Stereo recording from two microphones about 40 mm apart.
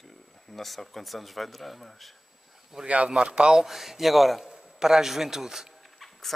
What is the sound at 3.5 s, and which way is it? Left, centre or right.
Speech, centre.